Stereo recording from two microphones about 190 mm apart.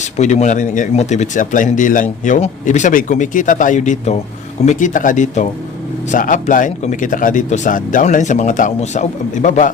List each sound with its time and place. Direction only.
0.0 s speech: 40° left (ahead or behind)